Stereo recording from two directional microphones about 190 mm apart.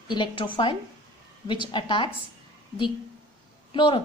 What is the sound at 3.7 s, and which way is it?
Speech, 25° left (ahead or behind).